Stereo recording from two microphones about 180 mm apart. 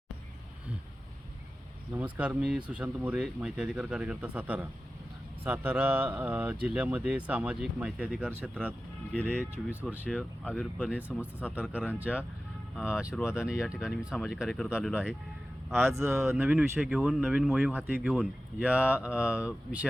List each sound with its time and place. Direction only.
2.0 s speech: 10° right (ahead or behind)
9.1 s speech: 5° left (ahead or behind)
15.9 s speech: 15° right (ahead or behind)